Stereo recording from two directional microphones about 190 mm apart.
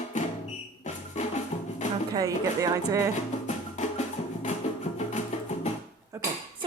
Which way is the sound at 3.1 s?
35° left (ahead or behind).